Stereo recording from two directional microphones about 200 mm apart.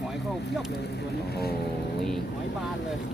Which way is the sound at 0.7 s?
55° left (ahead or behind).